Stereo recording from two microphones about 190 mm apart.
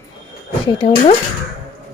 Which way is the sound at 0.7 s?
30° left (ahead or behind).